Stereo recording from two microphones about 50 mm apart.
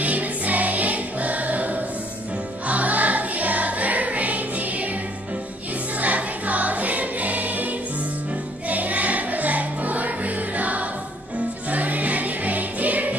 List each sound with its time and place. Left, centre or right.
0.0 s music: right
5.9 s music: right